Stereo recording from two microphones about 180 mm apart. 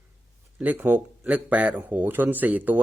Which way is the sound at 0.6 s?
10° right (ahead or behind).